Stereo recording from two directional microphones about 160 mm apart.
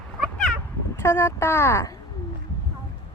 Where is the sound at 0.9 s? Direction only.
15° left (ahead or behind).